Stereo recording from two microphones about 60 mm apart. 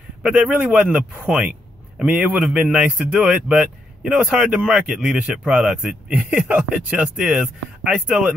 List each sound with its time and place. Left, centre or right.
0.2 s a man's voice: right